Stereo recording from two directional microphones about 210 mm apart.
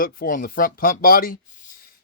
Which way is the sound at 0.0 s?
40° left (ahead or behind).